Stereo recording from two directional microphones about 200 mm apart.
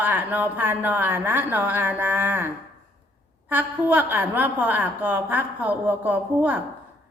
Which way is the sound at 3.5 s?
10° right (ahead or behind).